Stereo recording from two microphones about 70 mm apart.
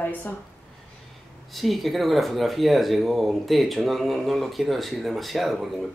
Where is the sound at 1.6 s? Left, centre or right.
Centre.